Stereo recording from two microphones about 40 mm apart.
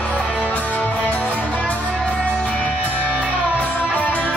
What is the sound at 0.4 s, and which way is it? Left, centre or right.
Music, left.